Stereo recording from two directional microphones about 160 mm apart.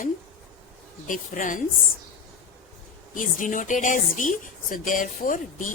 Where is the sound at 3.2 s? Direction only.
55° left (ahead or behind).